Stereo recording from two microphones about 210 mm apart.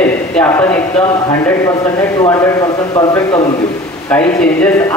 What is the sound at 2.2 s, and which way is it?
Speech, 20° left (ahead or behind).